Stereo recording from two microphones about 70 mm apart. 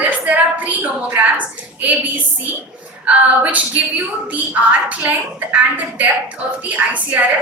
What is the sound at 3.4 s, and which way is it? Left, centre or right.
A woman's voice, right.